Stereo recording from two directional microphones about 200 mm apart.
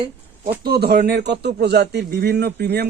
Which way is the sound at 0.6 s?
50° right (ahead or behind).